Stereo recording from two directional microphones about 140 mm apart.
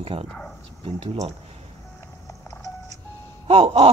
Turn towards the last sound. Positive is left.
turn(degrees=-45)  # may be behind; listen again after turning